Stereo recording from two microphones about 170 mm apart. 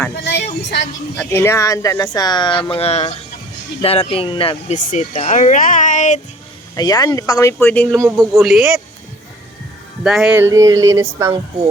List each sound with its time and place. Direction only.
0.3 s speech: 85° left
1.1 s speech: 10° left (ahead or behind); by 4.5 s 30° left (ahead or behind)
4.7 s speech: 45° left (ahead or behind)
6.7 s speech: 20° left (ahead or behind)
7.9 s speech: 15° right (ahead or behind)
8.4 s speech: centre (ahead or behind)
10.0 s speech: 5° right (ahead or behind)
10.4 s a sound: 20° right (ahead or behind)